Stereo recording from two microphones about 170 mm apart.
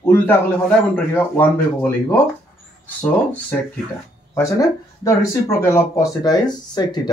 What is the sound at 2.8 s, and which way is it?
Speech, 10° left (ahead or behind).